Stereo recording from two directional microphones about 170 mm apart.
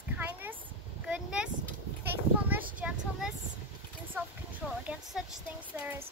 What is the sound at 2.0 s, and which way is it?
Children playing, 10° right (ahead or behind).